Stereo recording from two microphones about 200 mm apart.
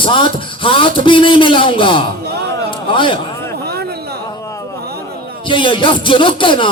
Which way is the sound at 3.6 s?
55° right (ahead or behind).